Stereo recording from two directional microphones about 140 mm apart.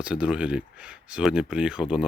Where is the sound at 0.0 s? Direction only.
10° right (ahead or behind).